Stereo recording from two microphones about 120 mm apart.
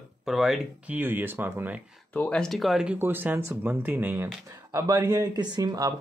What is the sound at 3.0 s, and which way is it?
Speech, 20° right (ahead or behind).